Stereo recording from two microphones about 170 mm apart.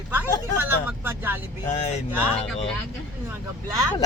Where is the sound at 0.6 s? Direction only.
10° right (ahead or behind).